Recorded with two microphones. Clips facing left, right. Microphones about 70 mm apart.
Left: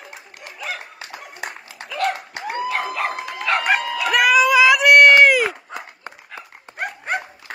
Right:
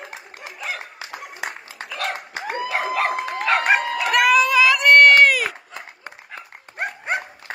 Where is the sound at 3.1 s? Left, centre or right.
Right.